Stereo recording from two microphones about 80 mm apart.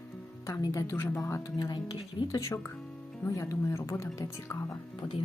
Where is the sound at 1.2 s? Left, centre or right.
Left.